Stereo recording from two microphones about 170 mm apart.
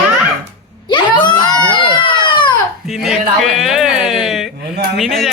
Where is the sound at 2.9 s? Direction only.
Centre (ahead or behind).